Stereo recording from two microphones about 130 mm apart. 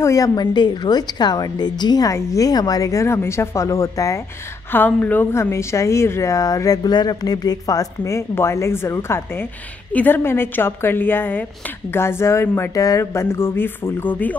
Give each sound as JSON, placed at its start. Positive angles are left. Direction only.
{"t": 0.0, "sound": "a woman's voice", "side_deg": 25}
{"t": 4.7, "sound": "a woman's voice", "side_deg": 15}